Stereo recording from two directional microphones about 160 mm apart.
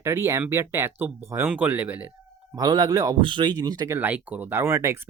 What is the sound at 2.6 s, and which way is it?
Speech, 25° right (ahead or behind).